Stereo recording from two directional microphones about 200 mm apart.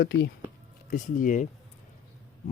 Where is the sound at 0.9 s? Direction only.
40° left (ahead or behind).